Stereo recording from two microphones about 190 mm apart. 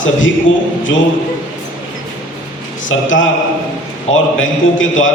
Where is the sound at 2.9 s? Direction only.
90° left.